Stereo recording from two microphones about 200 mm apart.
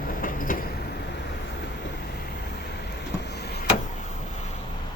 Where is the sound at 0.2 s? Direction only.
45° left (ahead or behind).